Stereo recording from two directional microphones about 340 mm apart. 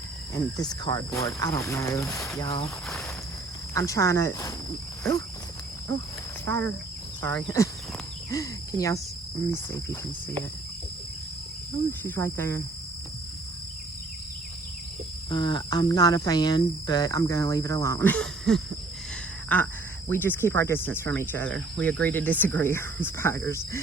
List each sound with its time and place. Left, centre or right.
0.3 s speech: centre
3.8 s speech: centre
6.4 s speech: centre
11.9 s speech: centre
15.3 s speech: centre